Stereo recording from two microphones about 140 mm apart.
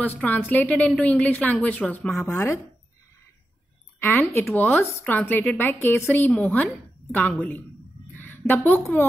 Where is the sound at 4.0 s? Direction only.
15° left (ahead or behind).